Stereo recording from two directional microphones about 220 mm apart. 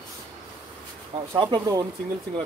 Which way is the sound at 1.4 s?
20° right (ahead or behind).